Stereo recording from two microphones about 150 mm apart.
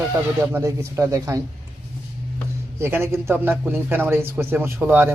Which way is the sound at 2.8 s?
15° right (ahead or behind).